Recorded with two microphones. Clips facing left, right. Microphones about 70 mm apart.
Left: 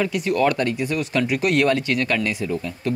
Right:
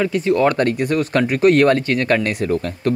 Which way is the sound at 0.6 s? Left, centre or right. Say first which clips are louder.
Right 5 dB; right.